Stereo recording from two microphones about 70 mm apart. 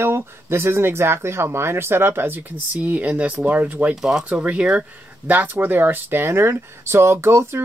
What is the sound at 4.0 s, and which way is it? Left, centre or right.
Speech, centre.